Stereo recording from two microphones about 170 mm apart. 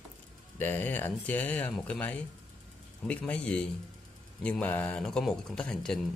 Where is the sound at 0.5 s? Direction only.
10° left (ahead or behind).